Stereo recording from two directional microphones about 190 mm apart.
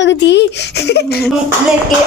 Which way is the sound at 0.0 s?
65° left (ahead or behind).